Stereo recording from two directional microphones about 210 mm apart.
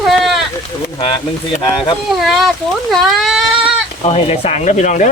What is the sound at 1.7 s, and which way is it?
Speech, 25° left (ahead or behind).